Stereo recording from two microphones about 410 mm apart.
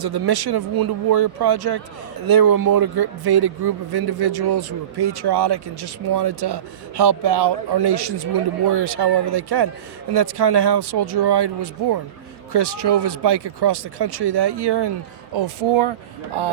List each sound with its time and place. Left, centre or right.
0.0 s speech: right
15.3 s speech: right